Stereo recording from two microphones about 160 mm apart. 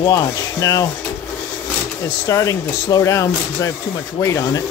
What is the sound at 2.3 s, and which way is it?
Speech, 20° left (ahead or behind).